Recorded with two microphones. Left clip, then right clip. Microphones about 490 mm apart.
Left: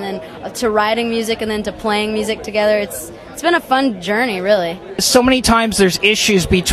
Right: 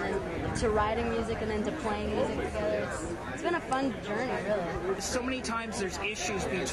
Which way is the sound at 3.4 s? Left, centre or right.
Left.